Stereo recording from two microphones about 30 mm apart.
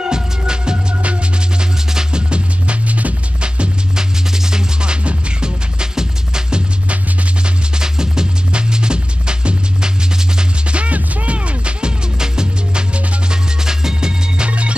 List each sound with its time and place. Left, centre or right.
0.0 s music: right
2.9 s music: right
3.3 s music: right
3.9 s music: right
7.8 s music: right
10.7 s music: right
12.2 s music: right
14.4 s music: right